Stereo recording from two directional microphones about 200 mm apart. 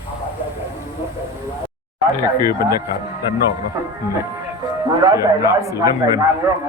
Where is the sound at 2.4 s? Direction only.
20° right (ahead or behind).